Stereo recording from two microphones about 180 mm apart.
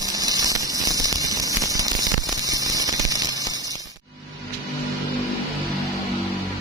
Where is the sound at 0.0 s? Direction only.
20° right (ahead or behind).